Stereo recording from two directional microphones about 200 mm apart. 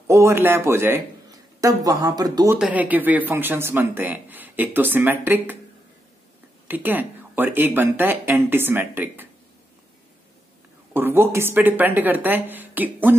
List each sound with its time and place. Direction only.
0.1 s speech: 15° right (ahead or behind)
6.7 s speech: 10° right (ahead or behind)
10.9 s speech: 10° right (ahead or behind)